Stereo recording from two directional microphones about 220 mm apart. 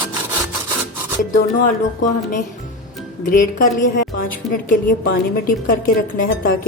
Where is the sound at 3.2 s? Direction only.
35° left (ahead or behind).